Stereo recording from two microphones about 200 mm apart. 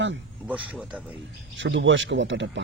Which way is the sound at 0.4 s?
5° right (ahead or behind).